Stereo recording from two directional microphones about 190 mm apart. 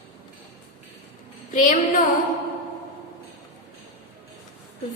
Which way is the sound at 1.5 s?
40° left (ahead or behind).